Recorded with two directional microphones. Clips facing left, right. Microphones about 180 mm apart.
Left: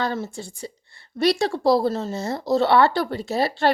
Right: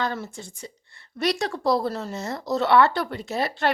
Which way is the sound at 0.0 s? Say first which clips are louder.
Left 3 dB; 30° left (ahead or behind).